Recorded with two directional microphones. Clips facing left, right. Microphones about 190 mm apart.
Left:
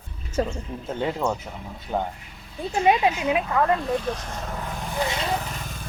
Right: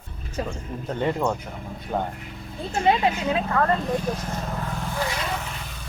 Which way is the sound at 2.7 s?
15° left (ahead or behind).